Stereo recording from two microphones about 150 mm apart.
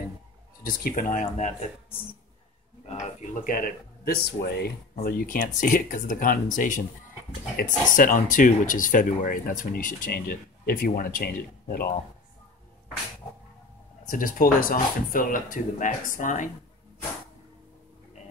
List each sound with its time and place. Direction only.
0.7 s speech: 65° left (ahead or behind); by 1.7 s 50° left (ahead or behind)
3.0 s speech: 60° left (ahead or behind); by 11.9 s 90° left
14.0 s speech: 65° left (ahead or behind)